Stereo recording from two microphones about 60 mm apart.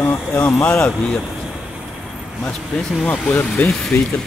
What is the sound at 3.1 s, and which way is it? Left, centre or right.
Speech, left.